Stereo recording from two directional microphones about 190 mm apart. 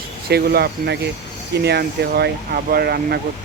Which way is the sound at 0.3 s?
55° right (ahead or behind).